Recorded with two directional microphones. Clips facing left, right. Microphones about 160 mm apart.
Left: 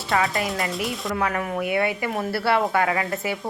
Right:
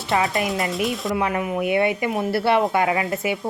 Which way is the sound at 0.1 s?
20° right (ahead or behind).